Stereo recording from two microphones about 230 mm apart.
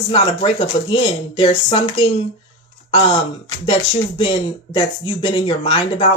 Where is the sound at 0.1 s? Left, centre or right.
Left.